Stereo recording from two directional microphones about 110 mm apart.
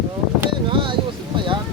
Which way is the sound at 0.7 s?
50° right (ahead or behind).